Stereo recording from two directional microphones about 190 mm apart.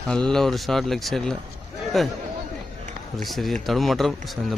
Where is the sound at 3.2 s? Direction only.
Centre (ahead or behind).